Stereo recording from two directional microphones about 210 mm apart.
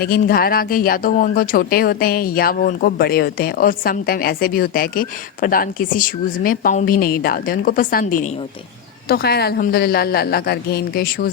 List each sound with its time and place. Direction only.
0.0 s speech: 45° left (ahead or behind)